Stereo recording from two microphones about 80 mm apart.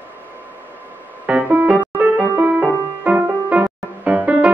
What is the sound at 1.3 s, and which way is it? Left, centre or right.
Music, centre.